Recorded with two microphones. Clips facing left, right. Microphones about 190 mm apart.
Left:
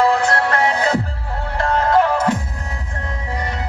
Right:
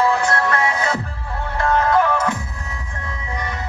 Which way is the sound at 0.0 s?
30° left (ahead or behind).